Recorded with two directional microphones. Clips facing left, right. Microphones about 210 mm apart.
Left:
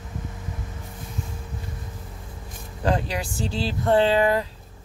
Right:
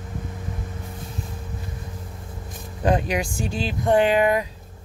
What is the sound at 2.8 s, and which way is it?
Speech, 15° right (ahead or behind).